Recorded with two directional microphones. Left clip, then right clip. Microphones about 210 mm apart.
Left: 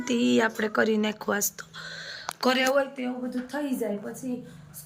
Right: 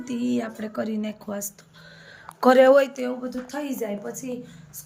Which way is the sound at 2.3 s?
35° right (ahead or behind).